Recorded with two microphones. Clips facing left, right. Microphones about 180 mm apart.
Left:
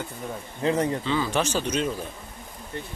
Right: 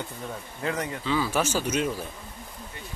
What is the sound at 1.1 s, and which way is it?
Speech, 5° right (ahead or behind).